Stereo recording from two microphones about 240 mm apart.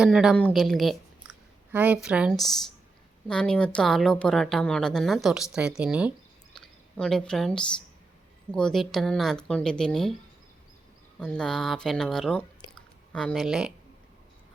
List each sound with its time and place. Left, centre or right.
0.0 s a woman's voice: centre
11.2 s a woman's voice: centre